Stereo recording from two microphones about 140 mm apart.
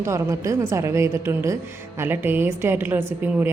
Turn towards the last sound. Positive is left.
turn(degrees=-15)  # may be behind; listen again after turning